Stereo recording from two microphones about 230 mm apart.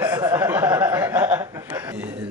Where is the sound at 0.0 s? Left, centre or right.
Centre.